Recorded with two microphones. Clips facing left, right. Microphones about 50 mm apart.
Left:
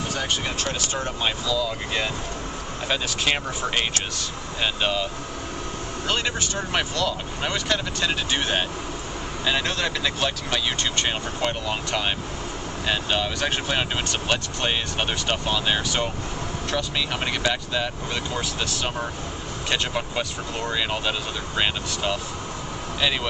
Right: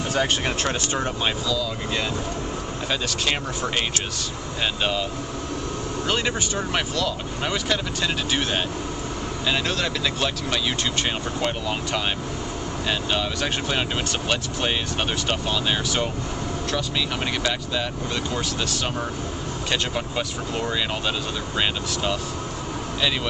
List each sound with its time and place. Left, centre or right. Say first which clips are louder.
0.1 s speech: right 7 dB; right
1.5 s speech: even; centre
6.0 s speech: right 1 dB; centre